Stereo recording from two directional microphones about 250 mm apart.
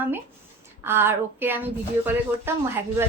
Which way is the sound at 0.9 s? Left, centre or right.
Centre.